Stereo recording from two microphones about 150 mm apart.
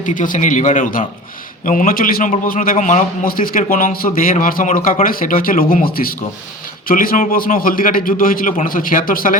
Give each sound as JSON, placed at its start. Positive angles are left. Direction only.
{"t": 0.0, "sound": "a man's voice", "side_deg": 60}
{"t": 2.5, "sound": "a man's voice", "side_deg": 65}